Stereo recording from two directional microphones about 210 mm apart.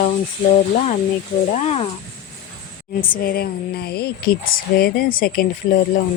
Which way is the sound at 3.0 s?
45° left (ahead or behind).